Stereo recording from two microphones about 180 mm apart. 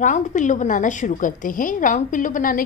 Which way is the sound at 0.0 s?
45° left (ahead or behind).